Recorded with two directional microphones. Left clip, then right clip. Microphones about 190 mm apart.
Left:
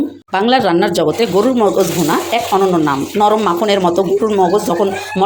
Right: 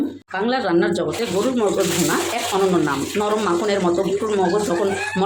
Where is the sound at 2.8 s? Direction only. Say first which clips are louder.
Left 8 dB; 30° left (ahead or behind).